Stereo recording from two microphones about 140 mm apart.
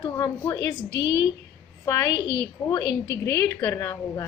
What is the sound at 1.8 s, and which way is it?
A woman's voice, 25° left (ahead or behind).